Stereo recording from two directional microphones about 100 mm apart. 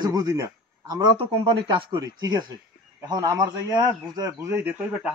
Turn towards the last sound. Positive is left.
turn(degrees=-20)  # may be behind; listen again after turning